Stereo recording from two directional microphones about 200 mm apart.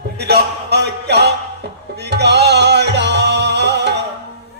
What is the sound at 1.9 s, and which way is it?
Music, 55° right (ahead or behind).